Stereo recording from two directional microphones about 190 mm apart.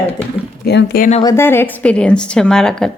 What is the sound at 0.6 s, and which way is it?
Speech, 55° left (ahead or behind).